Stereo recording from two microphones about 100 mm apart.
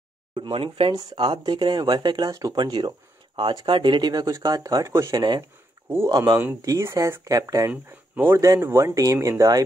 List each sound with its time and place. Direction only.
0.4 s speech: 60° right (ahead or behind); by 5.1 s 30° right (ahead or behind)
5.1 s speech: 40° right (ahead or behind)
7.7 s speech: 20° right (ahead or behind)
8.4 s speech: 30° right (ahead or behind)